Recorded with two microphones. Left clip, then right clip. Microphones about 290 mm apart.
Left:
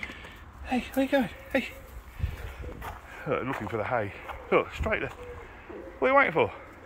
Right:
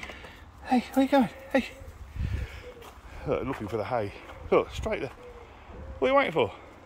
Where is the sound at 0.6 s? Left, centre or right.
Centre.